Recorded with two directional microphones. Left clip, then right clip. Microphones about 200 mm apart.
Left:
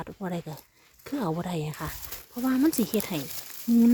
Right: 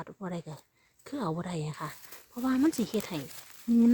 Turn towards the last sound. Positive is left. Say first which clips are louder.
# left 3 dB
turn(degrees=20)  # may be behind; listen again after turning